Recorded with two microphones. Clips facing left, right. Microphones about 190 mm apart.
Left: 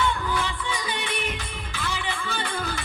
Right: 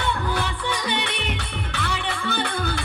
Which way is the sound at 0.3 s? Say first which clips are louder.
Right 2 dB; 70° right (ahead or behind).